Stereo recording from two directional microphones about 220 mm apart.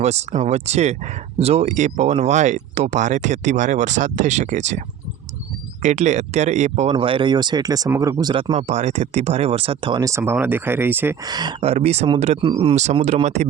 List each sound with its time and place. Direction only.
0.0 s speech: 30° right (ahead or behind)
5.8 s speech: 30° right (ahead or behind)